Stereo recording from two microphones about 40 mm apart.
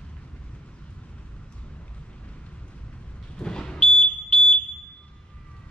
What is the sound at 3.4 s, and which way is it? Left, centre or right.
Smoke detector, centre.